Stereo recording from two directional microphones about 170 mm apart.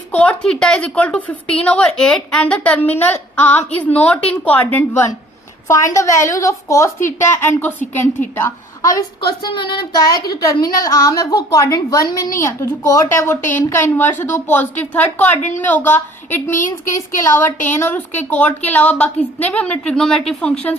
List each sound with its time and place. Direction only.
0.1 s a woman's voice: 5° left (ahead or behind)
15.4 s speech: 45° left (ahead or behind)
15.6 s a woman's voice: 10° left (ahead or behind)
16.6 s speech: 50° left (ahead or behind)
17.2 s a woman's voice: 15° left (ahead or behind)